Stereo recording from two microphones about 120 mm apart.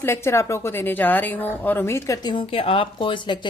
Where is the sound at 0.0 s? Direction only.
20° left (ahead or behind).